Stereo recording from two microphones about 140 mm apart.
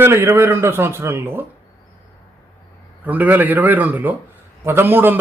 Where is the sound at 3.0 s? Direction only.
10° right (ahead or behind).